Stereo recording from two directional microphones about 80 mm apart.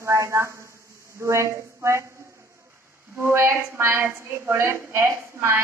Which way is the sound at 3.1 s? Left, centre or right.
Right.